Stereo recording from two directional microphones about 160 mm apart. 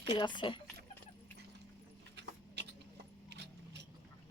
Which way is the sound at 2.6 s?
90° right.